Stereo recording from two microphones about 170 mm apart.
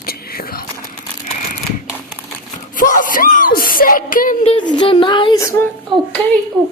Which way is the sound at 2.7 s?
50° left (ahead or behind).